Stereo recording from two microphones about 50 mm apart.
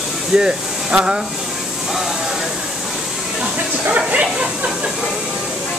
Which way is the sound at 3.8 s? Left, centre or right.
Right.